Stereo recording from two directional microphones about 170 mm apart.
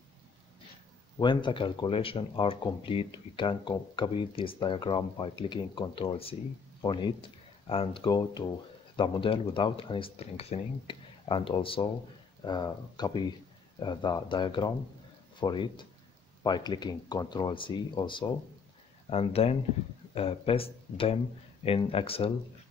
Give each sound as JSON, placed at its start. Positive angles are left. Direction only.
{"t": 1.2, "sound": "speech", "side_deg": 25}